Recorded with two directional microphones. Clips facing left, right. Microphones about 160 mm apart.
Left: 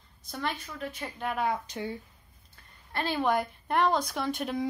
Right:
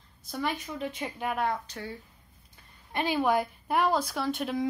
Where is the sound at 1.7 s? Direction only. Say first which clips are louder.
Left 4 dB; 20° left (ahead or behind).